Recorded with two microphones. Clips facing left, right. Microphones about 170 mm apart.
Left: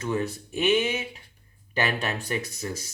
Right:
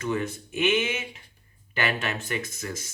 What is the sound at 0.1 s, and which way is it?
Speech, 35° left (ahead or behind).